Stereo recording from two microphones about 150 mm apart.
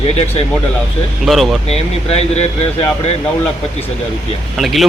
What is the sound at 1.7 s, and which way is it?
Speech, 45° left (ahead or behind).